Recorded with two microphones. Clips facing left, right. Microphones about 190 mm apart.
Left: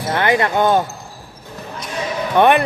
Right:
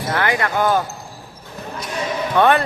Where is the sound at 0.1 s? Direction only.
20° left (ahead or behind).